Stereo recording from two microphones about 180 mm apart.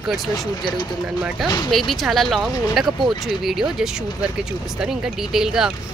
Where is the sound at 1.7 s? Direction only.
Centre (ahead or behind).